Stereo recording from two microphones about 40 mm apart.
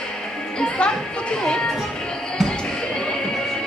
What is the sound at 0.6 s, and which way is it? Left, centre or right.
Music, left.